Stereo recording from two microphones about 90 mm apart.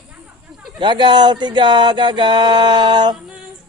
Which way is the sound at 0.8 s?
60° right (ahead or behind).